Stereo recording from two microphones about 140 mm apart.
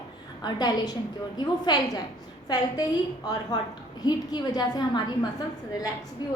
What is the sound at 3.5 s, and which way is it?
A woman's voice, 30° left (ahead or behind).